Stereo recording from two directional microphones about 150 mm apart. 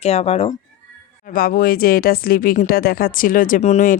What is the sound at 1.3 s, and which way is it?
Speech, 75° left (ahead or behind).